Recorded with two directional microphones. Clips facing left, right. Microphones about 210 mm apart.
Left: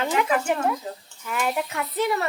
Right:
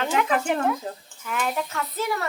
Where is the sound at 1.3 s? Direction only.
5° left (ahead or behind).